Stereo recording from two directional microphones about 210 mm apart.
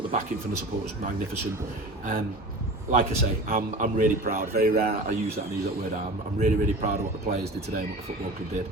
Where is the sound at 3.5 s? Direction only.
40° right (ahead or behind).